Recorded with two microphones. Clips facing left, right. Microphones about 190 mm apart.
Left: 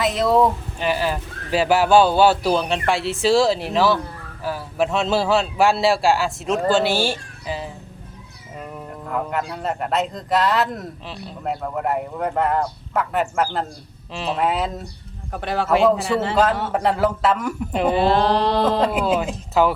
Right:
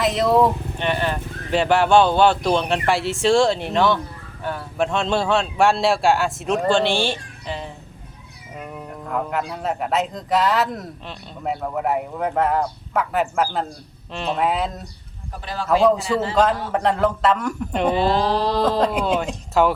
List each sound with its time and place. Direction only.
0.0 s speech: centre (ahead or behind)
15.3 s mantra: 60° left (ahead or behind)
16.3 s speech: 5° left (ahead or behind)
18.1 s mantra: 65° left (ahead or behind)
18.6 s speech: 5° left (ahead or behind)